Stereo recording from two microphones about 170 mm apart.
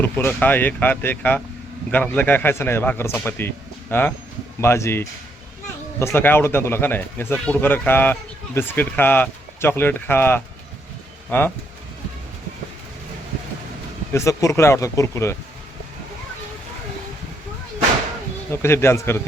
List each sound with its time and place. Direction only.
0.0 s speech: 10° left (ahead or behind)
14.1 s speech: 15° left (ahead or behind)
18.5 s speech: 15° left (ahead or behind)